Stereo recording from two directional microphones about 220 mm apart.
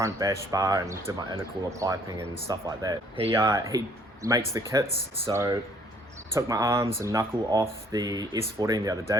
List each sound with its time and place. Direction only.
0.0 s speech: 15° right (ahead or behind)